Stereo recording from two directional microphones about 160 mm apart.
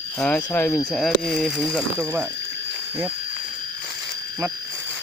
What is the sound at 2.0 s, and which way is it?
Speech, 15° right (ahead or behind).